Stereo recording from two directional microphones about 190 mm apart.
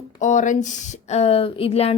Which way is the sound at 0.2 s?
40° left (ahead or behind).